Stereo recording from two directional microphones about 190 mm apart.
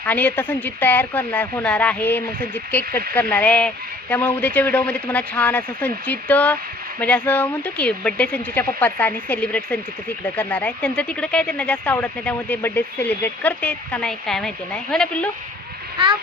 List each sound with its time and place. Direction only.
0.0 s speech: 10° left (ahead or behind)
16.0 s speech: 30° right (ahead or behind)